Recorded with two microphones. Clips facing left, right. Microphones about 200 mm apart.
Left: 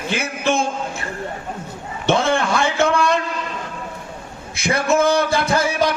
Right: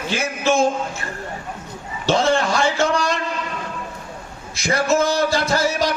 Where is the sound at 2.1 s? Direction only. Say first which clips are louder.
Even; 55° left (ahead or behind).